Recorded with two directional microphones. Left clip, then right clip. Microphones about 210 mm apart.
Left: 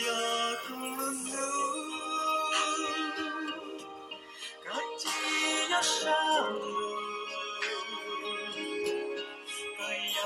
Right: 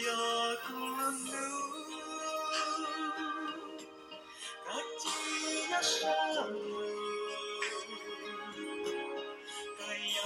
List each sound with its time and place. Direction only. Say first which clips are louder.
0.0 s music: left 2 dB; 25° left (ahead or behind)
4.7 s music: left 4 dB; 35° left (ahead or behind)